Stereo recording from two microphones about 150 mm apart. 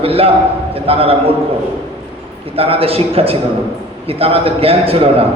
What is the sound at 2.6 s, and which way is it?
A man's voice, 40° right (ahead or behind).